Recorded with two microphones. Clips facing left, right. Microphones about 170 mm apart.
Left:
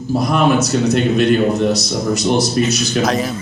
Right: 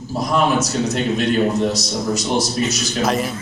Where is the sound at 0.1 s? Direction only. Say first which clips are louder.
Left 4 dB; 65° left (ahead or behind).